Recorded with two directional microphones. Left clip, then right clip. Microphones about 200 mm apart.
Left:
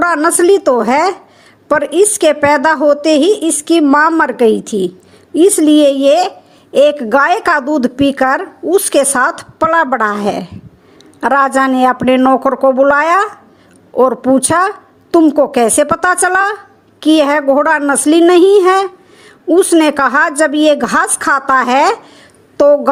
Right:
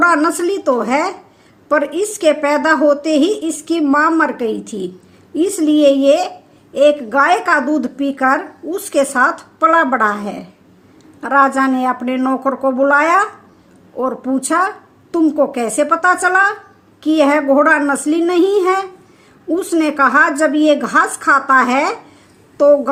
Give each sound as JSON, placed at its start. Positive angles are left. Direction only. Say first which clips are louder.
{"t": 0.0, "sound": "a woman's voice", "louder": "left 2 dB", "side_deg": 40}